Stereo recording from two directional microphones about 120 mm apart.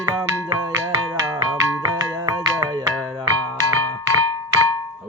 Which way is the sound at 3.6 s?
20° left (ahead or behind).